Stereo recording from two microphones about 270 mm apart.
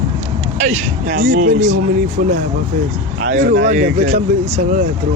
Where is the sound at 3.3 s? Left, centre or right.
Right.